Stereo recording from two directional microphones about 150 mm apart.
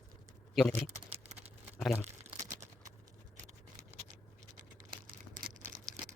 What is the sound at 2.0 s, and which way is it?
Crumpling, 15° right (ahead or behind).